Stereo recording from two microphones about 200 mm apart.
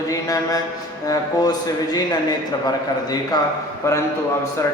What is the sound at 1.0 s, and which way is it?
Speech, 20° left (ahead or behind).